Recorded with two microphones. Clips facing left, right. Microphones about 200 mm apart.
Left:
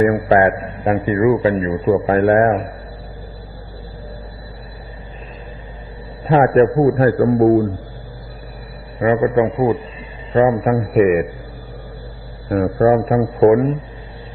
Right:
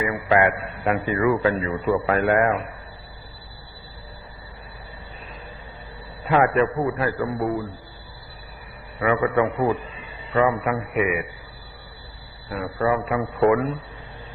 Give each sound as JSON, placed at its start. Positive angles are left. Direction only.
{"t": 0.0, "sound": "a man's voice", "side_deg": 40}
{"t": 0.9, "sound": "a man's voice", "side_deg": 25}
{"t": 6.2, "sound": "a man's voice", "side_deg": 35}
{"t": 9.0, "sound": "a man's voice", "side_deg": 30}
{"t": 12.5, "sound": "a man's voice", "side_deg": 45}